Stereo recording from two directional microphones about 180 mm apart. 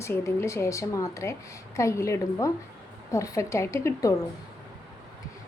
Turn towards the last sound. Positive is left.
turn(degrees=15)  # may be behind; listen again after turning